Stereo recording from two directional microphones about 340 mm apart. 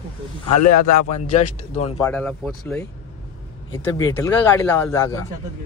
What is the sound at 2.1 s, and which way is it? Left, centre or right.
Speech, centre.